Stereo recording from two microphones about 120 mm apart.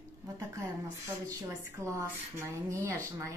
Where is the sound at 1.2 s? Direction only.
25° right (ahead or behind).